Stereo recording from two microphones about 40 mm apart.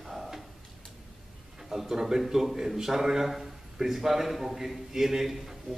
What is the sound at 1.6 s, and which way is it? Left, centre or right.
A man's voice, centre.